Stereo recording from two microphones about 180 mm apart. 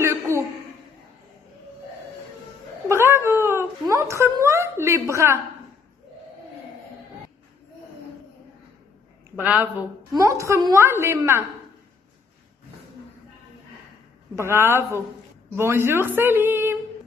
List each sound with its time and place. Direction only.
0.0 s a sound: 15° right (ahead or behind)
2.9 s cat: 15° right (ahead or behind)
9.4 s a woman's voice: 10° right (ahead or behind)
14.3 s a woman's voice: 15° right (ahead or behind)